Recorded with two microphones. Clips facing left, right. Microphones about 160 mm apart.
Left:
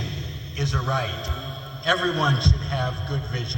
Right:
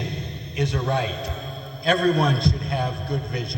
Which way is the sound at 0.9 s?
65° right (ahead or behind).